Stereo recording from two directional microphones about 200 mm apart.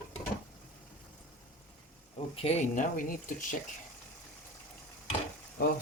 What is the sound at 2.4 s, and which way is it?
Speech, 30° left (ahead or behind).